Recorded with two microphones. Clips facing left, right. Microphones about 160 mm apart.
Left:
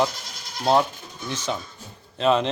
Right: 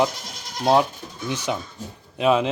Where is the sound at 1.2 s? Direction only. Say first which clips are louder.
Right 2 dB; 15° right (ahead or behind).